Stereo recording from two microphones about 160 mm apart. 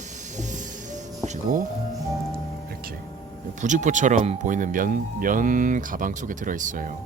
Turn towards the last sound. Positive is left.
turn(degrees=-55)  # may be behind; listen again after turning